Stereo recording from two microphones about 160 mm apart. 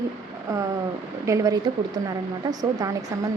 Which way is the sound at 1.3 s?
20° right (ahead or behind).